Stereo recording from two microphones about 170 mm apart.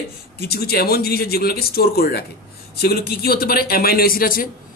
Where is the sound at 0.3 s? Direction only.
65° left (ahead or behind).